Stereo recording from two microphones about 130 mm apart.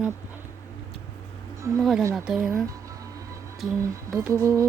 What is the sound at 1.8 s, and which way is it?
Speech, centre (ahead or behind).